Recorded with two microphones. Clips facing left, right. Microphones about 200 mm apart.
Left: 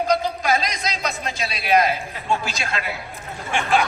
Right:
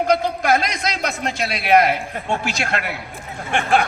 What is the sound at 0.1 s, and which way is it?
A man's voice, 60° right (ahead or behind).